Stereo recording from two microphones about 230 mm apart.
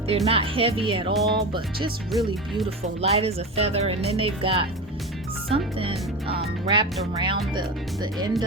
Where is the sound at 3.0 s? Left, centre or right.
Right.